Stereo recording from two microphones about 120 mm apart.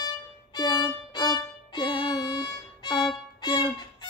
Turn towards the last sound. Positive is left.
turn(degrees=40)  # may be behind; listen again after turning